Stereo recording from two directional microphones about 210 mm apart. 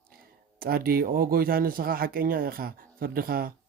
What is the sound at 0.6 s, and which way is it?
Speech, 45° right (ahead or behind).